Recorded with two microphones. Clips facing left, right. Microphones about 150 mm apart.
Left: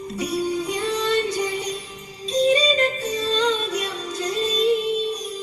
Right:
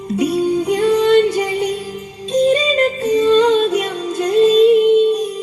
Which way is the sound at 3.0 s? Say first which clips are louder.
Right 10 dB; 60° right (ahead or behind).